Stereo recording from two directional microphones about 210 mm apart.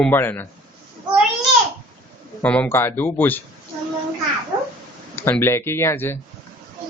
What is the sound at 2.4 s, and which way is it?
Speech, 5° left (ahead or behind).